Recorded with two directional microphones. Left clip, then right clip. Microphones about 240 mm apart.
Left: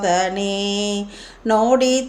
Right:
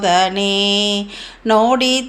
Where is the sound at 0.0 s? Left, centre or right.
Centre.